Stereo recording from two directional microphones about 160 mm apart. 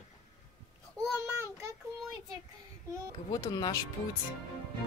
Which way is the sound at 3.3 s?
25° left (ahead or behind).